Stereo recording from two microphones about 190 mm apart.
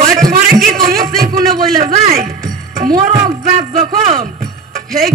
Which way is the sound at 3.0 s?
35° right (ahead or behind).